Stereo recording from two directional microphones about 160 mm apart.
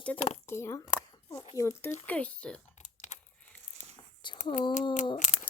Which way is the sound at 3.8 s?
55° left (ahead or behind).